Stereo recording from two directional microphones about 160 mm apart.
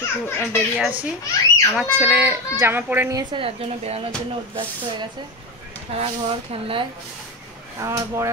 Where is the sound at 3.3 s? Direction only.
35° right (ahead or behind).